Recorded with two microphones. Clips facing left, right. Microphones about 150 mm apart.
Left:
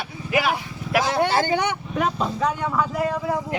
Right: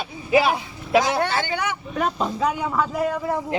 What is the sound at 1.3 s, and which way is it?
Speech, 35° left (ahead or behind).